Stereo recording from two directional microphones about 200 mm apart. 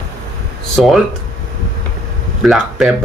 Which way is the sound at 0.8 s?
Centre (ahead or behind).